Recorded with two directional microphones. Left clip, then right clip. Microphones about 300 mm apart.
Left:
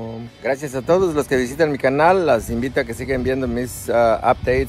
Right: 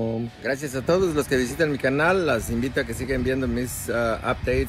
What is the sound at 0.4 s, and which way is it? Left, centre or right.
Speech, centre.